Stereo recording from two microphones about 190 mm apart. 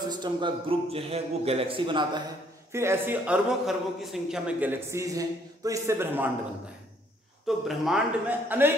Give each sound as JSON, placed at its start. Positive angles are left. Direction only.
{"t": 0.1, "sound": "a man's voice", "side_deg": -25}
{"t": 2.7, "sound": "a man's voice", "side_deg": -15}
{"t": 7.4, "sound": "a man's voice", "side_deg": 0}